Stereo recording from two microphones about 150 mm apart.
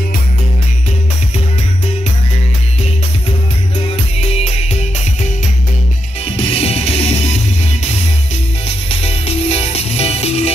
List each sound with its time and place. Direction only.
4.3 s music: 45° left (ahead or behind)
6.2 s music: 40° left (ahead or behind)
9.0 s music: 40° left (ahead or behind)